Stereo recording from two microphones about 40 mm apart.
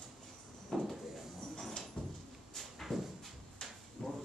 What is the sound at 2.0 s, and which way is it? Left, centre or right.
Cupboard open or close, centre.